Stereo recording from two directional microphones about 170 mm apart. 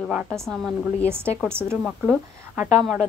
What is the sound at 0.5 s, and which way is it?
Speech, 5° left (ahead or behind).